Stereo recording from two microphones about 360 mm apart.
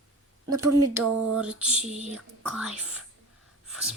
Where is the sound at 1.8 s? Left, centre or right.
Centre.